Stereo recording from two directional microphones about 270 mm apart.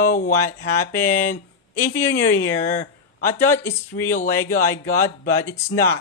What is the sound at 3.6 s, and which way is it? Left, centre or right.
Speech, centre.